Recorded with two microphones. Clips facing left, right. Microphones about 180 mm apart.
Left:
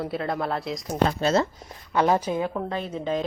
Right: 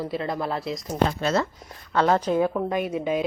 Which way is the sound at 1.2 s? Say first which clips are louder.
Left 2 dB; 30° left (ahead or behind).